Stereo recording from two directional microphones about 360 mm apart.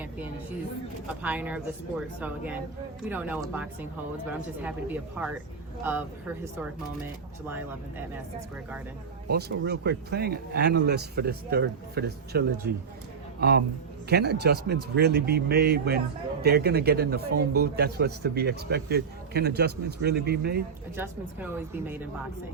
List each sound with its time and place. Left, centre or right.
1.0 s speech: centre
9.3 s speech: right
14.1 s speech: right
20.9 s speech: centre